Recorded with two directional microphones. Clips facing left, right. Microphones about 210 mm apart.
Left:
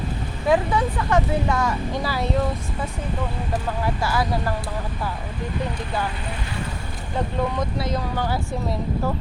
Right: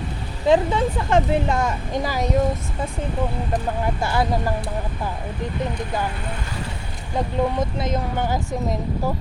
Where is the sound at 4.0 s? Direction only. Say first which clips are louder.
Right 2 dB; 25° right (ahead or behind).